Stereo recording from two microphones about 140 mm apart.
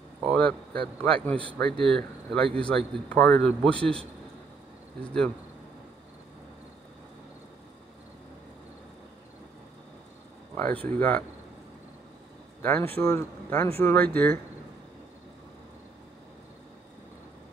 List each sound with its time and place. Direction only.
0.3 s speech: 5° left (ahead or behind)
10.5 s a sound: 10° left (ahead or behind)
10.9 s speech: 10° left (ahead or behind)
12.6 s speech: 15° left (ahead or behind)